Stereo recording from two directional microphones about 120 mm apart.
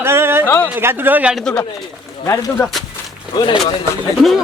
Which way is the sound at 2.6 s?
15° left (ahead or behind).